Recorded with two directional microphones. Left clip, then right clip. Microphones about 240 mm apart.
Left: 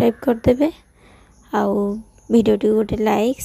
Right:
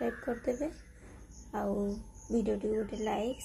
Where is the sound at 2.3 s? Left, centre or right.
Left.